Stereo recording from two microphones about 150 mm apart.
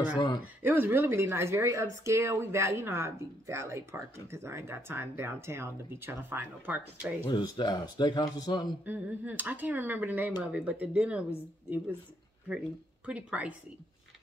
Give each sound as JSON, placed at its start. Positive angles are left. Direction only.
{"t": 0.6, "sound": "a woman's voice", "side_deg": -15}
{"t": 7.2, "sound": "speech", "side_deg": 30}
{"t": 8.8, "sound": "a woman's voice", "side_deg": -10}
{"t": 13.0, "sound": "a woman's voice", "side_deg": -10}